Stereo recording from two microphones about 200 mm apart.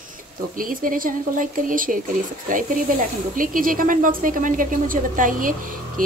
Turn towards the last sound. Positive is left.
turn(degrees=-45)  # may be behind; listen again after turning